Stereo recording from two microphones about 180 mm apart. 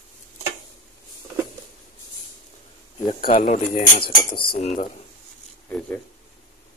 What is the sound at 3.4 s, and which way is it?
Speech, 45° left (ahead or behind).